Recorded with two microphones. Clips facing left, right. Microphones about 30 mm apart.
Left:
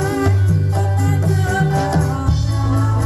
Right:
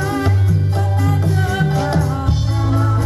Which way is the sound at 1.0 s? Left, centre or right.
Centre.